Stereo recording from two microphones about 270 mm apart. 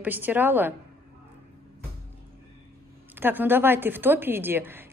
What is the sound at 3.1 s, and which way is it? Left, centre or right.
A woman's voice, centre.